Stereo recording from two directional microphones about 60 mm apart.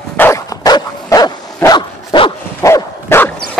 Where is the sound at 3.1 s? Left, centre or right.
Left.